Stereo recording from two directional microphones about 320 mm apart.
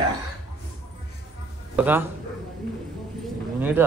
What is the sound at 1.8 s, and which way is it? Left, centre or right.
Speech, centre.